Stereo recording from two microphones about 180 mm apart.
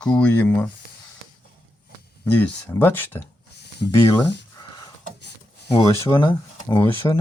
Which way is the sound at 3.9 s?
15° left (ahead or behind).